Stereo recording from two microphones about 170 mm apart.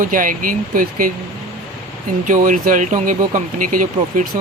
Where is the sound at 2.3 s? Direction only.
50° right (ahead or behind).